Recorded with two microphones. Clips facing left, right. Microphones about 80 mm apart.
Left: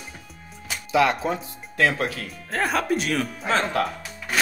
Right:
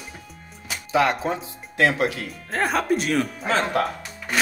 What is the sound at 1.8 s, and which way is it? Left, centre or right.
Speech, centre.